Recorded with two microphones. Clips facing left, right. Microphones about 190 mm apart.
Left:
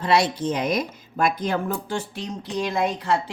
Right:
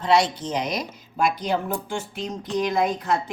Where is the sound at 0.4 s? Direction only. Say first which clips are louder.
Left 3 dB; 55° left (ahead or behind).